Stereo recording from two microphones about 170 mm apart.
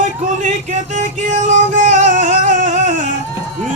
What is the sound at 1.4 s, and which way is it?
Music, 50° right (ahead or behind).